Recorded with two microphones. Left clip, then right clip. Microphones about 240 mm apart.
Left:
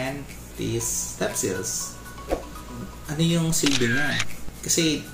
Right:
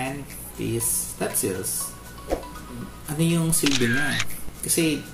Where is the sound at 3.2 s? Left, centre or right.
Centre.